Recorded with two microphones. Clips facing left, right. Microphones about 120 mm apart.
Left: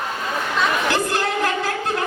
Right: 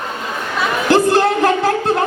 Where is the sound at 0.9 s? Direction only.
35° right (ahead or behind).